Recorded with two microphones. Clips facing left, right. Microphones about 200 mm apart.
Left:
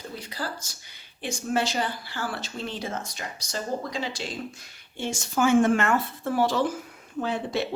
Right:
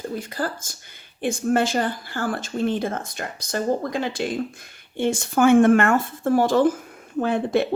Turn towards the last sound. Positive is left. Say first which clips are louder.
# right 7 dB
turn(degrees=-55)  # may be behind; listen again after turning